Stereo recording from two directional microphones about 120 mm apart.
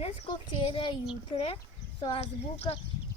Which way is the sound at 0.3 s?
45° left (ahead or behind).